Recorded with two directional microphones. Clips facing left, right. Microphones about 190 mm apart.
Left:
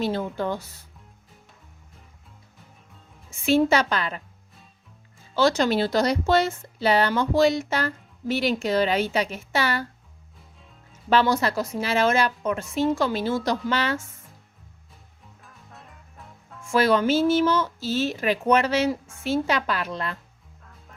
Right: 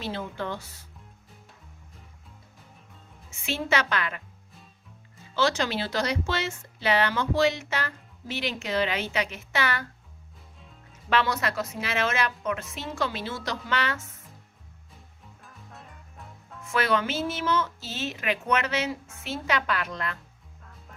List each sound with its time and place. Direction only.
0.0 s speech: 40° left (ahead or behind)
3.2 s speech: 35° left (ahead or behind)
5.3 s speech: 40° left (ahead or behind)
11.1 s speech: 35° left (ahead or behind)
15.2 s music: centre (ahead or behind)
16.7 s speech: 35° left (ahead or behind)